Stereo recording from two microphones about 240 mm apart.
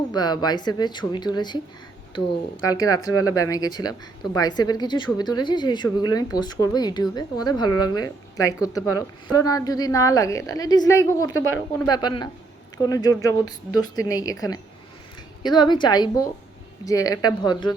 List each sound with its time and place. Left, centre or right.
0.1 s speech: centre
3.1 s speech: left
3.3 s speech: centre
11.3 s speech: left
11.9 s speech: centre